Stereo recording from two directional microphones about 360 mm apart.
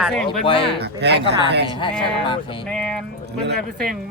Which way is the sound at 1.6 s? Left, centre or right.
Centre.